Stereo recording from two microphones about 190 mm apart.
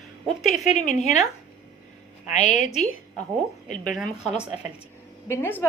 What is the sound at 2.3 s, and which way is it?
Speech, 40° left (ahead or behind).